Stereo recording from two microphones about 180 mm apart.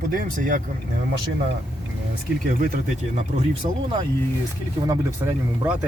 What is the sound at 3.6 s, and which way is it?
Speech, 25° right (ahead or behind).